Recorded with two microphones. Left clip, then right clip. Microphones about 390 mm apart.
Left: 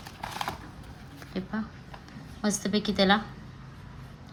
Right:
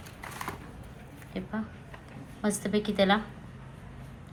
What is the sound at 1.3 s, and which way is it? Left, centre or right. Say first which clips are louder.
A woman's voice: left 1 dB; centre.